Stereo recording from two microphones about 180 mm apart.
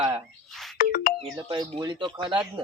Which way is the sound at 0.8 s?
50° left (ahead or behind).